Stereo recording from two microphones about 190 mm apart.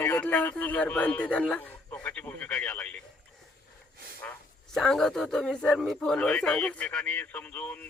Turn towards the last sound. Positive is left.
turn(degrees=10)  # may be behind; listen again after turning